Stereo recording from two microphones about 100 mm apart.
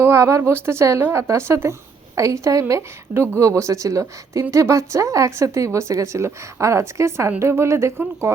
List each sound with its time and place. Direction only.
0.0 s a woman's voice: 25° right (ahead or behind)